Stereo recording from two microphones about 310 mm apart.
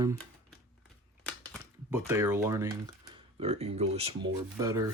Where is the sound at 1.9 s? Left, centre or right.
Centre.